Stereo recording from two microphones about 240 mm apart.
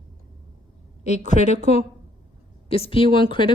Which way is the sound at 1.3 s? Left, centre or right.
Left.